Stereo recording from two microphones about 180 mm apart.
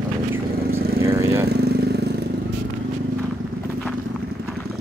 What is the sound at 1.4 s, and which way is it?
Vehicle, 65° right (ahead or behind).